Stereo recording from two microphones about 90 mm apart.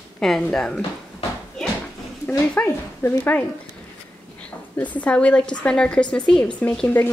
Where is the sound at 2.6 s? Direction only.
15° left (ahead or behind).